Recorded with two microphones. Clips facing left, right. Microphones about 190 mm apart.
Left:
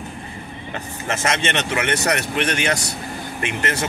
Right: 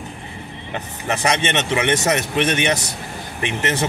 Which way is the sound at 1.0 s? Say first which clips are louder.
Right 2 dB; 15° right (ahead or behind).